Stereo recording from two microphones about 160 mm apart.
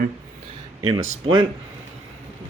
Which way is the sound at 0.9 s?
25° right (ahead or behind).